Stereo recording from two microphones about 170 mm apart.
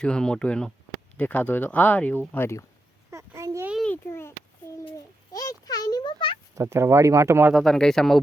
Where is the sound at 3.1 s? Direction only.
15° right (ahead or behind).